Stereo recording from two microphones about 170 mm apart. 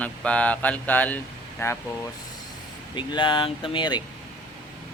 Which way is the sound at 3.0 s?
30° left (ahead or behind).